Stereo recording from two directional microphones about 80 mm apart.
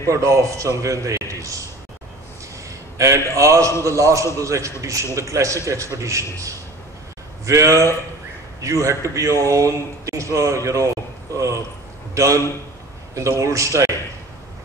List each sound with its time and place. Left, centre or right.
0.1 s a man's voice: right
3.0 s a man's voice: right